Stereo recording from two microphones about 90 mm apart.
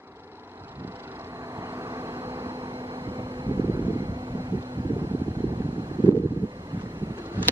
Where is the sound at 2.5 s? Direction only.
60° right (ahead or behind).